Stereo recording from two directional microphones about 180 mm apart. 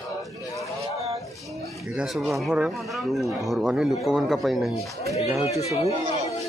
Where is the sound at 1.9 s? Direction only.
5° right (ahead or behind).